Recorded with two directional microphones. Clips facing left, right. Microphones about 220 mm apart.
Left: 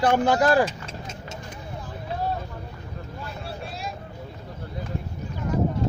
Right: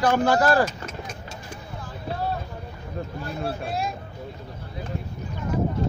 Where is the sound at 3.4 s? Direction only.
50° right (ahead or behind).